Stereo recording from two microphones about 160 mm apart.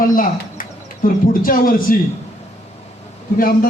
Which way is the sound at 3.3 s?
65° left (ahead or behind).